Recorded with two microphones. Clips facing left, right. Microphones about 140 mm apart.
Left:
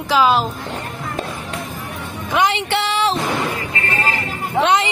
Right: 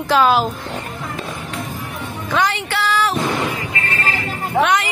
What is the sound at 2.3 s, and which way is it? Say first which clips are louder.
Speech: left 2 dB; 25° left (ahead or behind).